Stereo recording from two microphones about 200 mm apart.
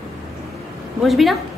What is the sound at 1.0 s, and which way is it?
Speech, centre (ahead or behind).